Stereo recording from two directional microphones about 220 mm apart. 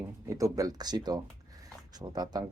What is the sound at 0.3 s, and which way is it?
Speech, 15° right (ahead or behind).